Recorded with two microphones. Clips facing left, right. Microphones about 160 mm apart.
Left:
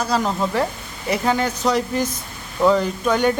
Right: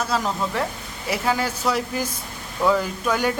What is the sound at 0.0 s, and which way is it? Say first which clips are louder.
A man's voice: left 3 dB; centre (ahead or behind).